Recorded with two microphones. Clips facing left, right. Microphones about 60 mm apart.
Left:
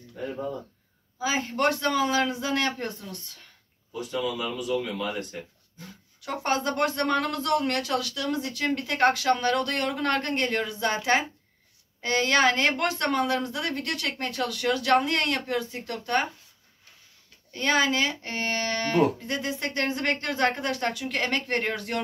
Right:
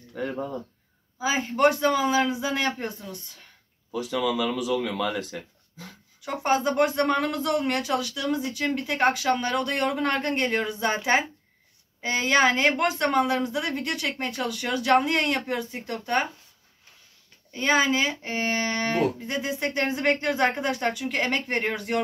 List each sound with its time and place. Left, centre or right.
0.1 s speech: right
1.2 s speech: centre
4.0 s speech: right
6.2 s speech: centre
17.5 s speech: centre